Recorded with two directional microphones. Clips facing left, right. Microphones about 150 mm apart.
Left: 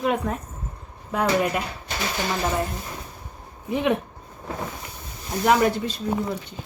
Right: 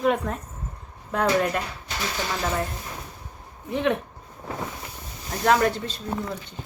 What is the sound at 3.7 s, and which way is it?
Speech, 10° left (ahead or behind).